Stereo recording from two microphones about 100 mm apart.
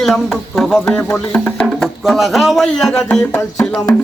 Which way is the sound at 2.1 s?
Centre (ahead or behind).